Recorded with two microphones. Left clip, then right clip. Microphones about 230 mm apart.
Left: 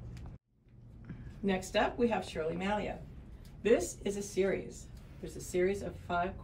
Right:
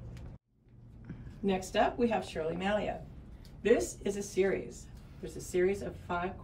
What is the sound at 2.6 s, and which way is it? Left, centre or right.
Speech, centre.